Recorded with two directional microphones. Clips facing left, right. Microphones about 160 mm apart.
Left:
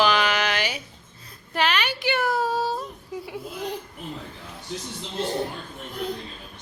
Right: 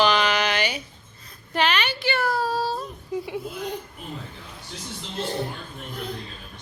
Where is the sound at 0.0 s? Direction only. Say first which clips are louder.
Right 1 dB; 5° left (ahead or behind).